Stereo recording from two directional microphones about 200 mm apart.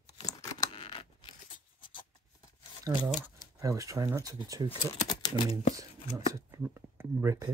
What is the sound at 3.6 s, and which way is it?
Speech, 15° right (ahead or behind).